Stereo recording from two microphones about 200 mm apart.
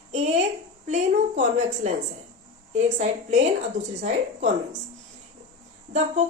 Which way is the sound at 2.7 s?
35° right (ahead or behind).